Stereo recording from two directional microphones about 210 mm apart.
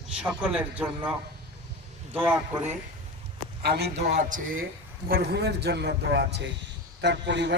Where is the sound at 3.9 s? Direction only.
35° right (ahead or behind).